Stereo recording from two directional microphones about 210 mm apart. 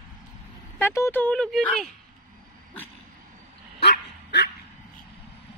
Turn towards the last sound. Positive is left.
turn(degrees=55)  # may be behind; listen again after turning